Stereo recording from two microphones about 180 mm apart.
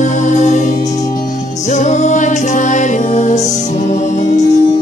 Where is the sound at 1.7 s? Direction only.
40° left (ahead or behind).